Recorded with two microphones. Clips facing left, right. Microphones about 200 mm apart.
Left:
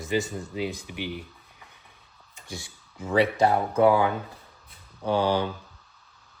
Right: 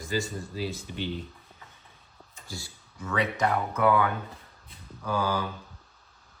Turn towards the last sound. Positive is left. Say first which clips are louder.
# left 5 dB
turn(degrees=30)  # may be behind; listen again after turning